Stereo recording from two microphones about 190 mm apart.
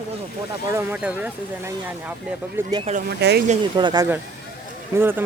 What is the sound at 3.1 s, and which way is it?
Speech, 60° right (ahead or behind).